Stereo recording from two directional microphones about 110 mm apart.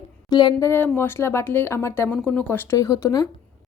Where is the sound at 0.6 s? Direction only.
20° left (ahead or behind).